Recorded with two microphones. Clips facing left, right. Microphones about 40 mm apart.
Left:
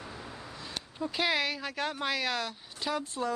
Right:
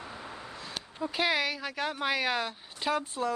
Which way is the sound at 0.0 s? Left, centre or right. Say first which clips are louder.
Right 1 dB; centre.